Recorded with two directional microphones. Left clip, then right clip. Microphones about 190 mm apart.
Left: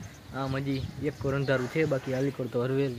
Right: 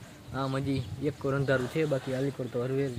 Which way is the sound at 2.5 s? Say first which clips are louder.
Left 3 dB; 25° left (ahead or behind).